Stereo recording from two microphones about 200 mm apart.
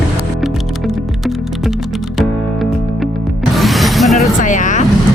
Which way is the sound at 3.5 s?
Centre (ahead or behind).